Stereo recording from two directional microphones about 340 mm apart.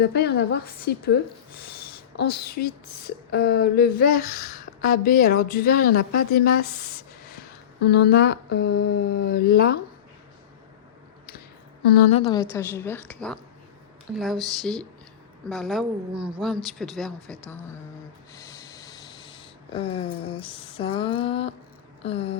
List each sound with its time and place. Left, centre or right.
0.0 s speech: left
11.9 s speech: left
12.2 s a woman's voice: centre
14.6 s a woman's voice: centre
18.3 s snort: centre
20.4 s a woman's voice: centre